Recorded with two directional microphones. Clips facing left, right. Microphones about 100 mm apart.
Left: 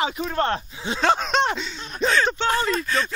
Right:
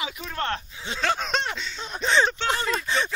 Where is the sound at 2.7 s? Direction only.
20° right (ahead or behind).